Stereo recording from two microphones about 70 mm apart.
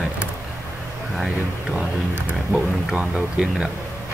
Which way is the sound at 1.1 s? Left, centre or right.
Centre.